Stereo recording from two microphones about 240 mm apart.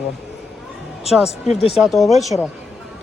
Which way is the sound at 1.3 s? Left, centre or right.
Left.